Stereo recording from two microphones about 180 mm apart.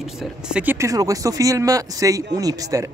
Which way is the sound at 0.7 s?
20° right (ahead or behind).